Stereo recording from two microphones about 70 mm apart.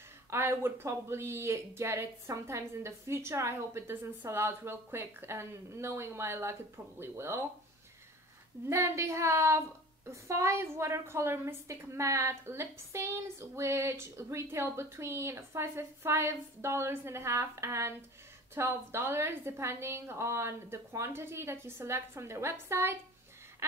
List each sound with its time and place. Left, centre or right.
0.3 s a woman's voice: right
8.6 s a woman's voice: right